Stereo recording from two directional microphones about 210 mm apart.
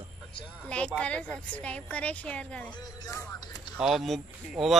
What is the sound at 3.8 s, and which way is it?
Speech, centre (ahead or behind).